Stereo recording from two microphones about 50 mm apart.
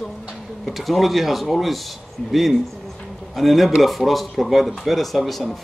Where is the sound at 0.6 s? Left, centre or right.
Centre.